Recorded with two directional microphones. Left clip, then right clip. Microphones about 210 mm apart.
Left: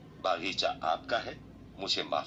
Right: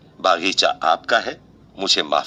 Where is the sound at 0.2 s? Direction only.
50° right (ahead or behind).